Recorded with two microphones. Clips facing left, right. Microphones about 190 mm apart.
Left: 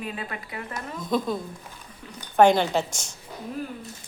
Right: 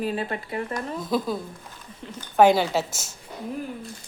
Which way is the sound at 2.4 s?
5° right (ahead or behind).